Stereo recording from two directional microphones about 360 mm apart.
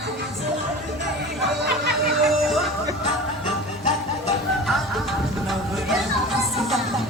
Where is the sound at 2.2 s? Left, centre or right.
Centre.